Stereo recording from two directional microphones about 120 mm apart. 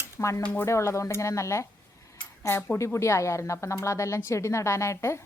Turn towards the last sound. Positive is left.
turn(degrees=20)  # may be behind; listen again after turning